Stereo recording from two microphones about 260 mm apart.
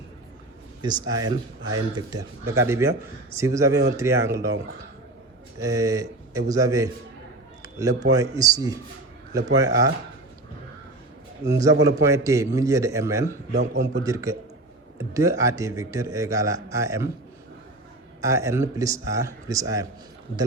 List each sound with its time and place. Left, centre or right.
0.8 s a man's voice: centre
5.5 s a man's voice: centre
7.6 s a sound: centre
8.4 s a man's voice: centre
11.4 s a man's voice: centre
13.7 s a man's voice: right
14.0 s a man's voice: centre
18.2 s a man's voice: centre